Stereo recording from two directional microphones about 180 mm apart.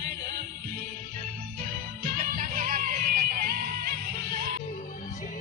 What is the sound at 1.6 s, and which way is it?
Music, 50° right (ahead or behind).